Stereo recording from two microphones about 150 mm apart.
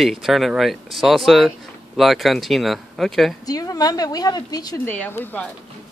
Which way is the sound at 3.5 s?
25° left (ahead or behind).